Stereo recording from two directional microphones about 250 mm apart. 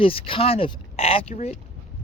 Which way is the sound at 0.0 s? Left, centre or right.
Left.